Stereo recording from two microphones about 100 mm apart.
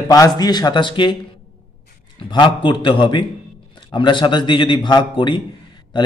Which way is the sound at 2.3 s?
50° left (ahead or behind).